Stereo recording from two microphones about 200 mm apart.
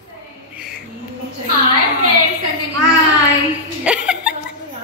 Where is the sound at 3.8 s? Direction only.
5° right (ahead or behind).